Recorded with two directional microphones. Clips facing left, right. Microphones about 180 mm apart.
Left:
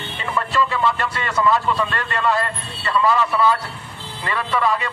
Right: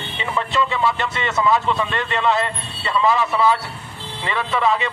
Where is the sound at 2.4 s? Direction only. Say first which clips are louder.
Right 1 dB; 15° right (ahead or behind).